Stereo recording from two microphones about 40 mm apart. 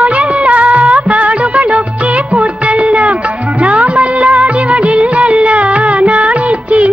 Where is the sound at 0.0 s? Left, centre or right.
Right.